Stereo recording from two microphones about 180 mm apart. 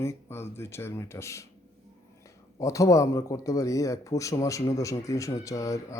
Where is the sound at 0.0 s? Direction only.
15° left (ahead or behind).